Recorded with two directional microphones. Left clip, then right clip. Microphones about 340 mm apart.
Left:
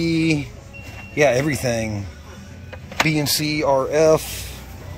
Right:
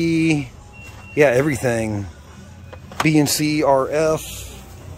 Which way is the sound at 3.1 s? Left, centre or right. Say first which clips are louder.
Right 7 dB; centre.